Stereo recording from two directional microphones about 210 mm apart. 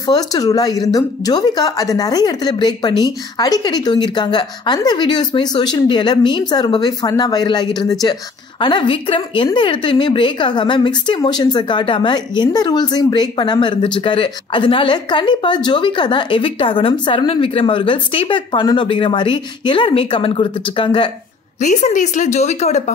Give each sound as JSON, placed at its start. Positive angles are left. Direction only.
{"t": 0.0, "sound": "a woman's voice", "side_deg": 20}
{"t": 21.5, "sound": "a woman's voice", "side_deg": 35}